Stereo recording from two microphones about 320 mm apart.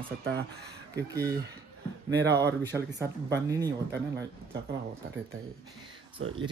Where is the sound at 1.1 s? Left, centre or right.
Centre.